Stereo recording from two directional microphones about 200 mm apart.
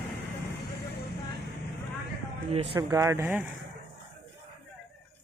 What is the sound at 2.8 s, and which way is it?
Speech, 15° right (ahead or behind).